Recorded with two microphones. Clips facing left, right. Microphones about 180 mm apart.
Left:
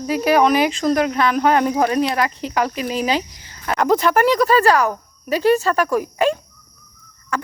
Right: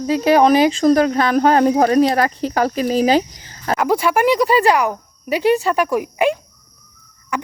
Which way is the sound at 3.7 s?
10° right (ahead or behind).